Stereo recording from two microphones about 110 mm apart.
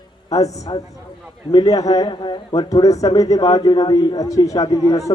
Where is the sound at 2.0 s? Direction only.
45° left (ahead or behind).